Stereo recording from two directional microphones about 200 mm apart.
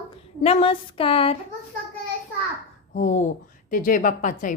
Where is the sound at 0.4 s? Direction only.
25° left (ahead or behind).